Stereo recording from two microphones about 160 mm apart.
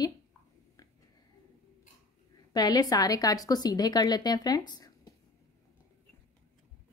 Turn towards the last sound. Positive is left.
turn(degrees=25)  # may be behind; listen again after turning